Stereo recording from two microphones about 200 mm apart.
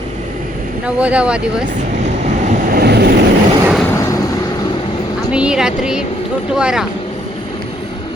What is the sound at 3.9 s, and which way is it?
Vehicle, 15° left (ahead or behind).